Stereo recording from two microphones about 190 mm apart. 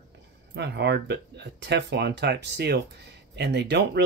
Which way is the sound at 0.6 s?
60° right (ahead or behind).